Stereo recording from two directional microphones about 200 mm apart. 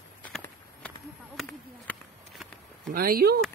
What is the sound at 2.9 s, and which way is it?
Speech, 45° right (ahead or behind).